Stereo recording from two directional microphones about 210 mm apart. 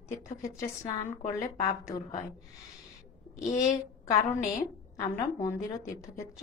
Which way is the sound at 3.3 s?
15° left (ahead or behind).